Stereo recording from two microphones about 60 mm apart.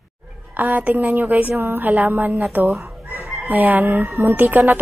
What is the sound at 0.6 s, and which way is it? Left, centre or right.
A woman's voice, right.